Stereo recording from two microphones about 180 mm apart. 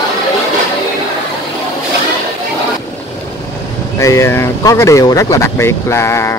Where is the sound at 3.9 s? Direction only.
15° left (ahead or behind).